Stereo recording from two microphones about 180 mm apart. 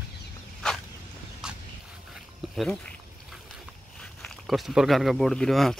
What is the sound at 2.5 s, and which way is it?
Speech, 5° left (ahead or behind).